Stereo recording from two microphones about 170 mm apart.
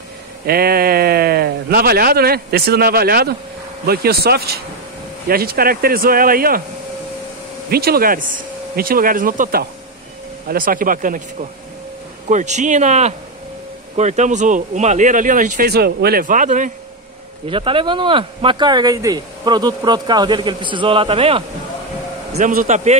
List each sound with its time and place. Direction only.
0.5 s speech: 65° right (ahead or behind)
7.7 s speech: 65° right (ahead or behind)
12.3 s speech: 45° right (ahead or behind)
15.7 s speech: 70° right (ahead or behind); by 16.7 s 50° right (ahead or behind)
17.5 s speech: 30° right (ahead or behind)
22.3 s speech: 50° right (ahead or behind)